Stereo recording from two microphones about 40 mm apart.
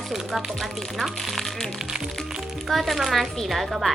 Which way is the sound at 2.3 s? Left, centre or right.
Centre.